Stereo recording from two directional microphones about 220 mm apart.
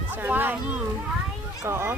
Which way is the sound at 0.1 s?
10° right (ahead or behind).